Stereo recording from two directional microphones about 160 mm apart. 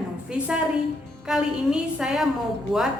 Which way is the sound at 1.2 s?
5° right (ahead or behind).